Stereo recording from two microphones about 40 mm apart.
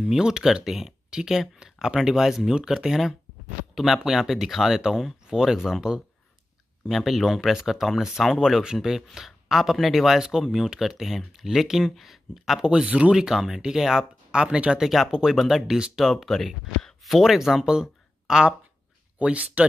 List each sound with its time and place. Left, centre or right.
0.0 s speech: centre
2.0 s speech: centre
6.9 s speech: centre
12.5 s speech: centre
12.8 s speech: right
13.1 s speech: centre
14.4 s speech: right
14.8 s speech: centre
15.0 s speech: centre
15.3 s speech: centre
16.3 s speech: centre
17.0 s speech: centre
19.1 s speech: right